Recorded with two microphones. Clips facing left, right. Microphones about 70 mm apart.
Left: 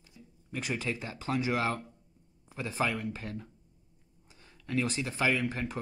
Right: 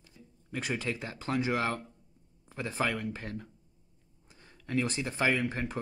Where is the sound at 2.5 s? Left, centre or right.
Right.